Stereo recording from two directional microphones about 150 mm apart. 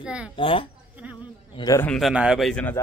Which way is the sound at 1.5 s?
25° left (ahead or behind).